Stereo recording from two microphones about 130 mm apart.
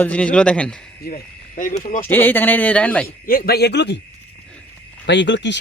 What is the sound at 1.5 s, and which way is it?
Speech, 90° left.